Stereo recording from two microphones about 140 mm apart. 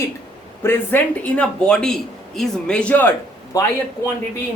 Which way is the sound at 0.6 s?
15° left (ahead or behind).